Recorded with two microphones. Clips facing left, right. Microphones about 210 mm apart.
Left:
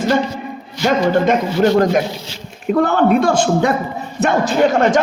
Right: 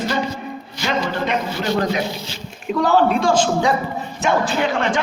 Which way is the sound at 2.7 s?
55° left (ahead or behind).